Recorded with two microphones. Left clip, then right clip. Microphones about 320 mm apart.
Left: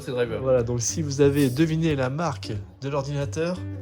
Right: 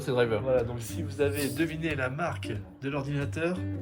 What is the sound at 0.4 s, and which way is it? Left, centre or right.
A man's voice, left.